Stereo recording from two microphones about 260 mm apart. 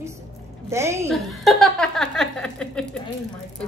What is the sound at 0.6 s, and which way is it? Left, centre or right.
Speech, centre.